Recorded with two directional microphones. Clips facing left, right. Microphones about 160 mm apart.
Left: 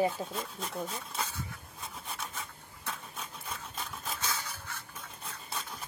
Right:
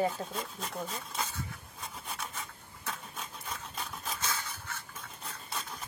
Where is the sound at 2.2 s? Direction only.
Centre (ahead or behind).